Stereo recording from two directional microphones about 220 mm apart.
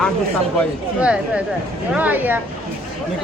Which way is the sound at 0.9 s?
5° right (ahead or behind).